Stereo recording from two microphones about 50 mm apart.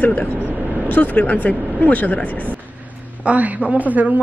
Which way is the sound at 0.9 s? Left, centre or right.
Left.